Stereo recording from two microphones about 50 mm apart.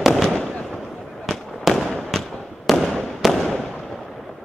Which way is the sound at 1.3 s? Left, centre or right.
Centre.